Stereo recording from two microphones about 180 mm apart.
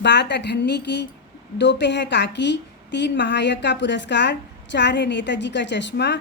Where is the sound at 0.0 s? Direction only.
75° left (ahead or behind).